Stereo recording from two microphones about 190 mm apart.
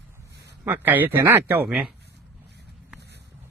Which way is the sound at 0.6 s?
10° right (ahead or behind).